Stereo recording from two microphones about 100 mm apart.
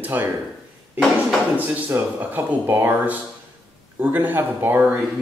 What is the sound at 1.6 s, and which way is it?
Speech, 20° right (ahead or behind).